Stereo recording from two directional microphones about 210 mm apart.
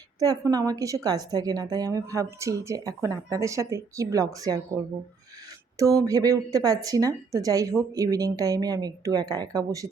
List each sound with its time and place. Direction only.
0.2 s a woman's voice: 15° right (ahead or behind)
5.8 s a woman's voice: 15° right (ahead or behind)